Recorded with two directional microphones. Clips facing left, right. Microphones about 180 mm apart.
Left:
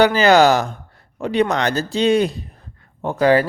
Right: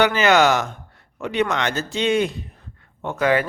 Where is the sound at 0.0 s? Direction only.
35° left (ahead or behind).